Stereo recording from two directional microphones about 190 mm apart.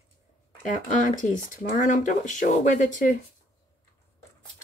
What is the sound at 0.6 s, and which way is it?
Speech, 40° left (ahead or behind).